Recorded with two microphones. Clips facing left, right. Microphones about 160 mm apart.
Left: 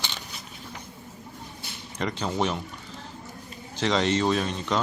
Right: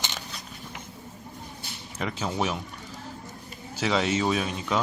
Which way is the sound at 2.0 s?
5° right (ahead or behind).